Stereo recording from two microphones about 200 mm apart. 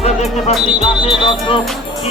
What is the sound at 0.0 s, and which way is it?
Music, 30° left (ahead or behind).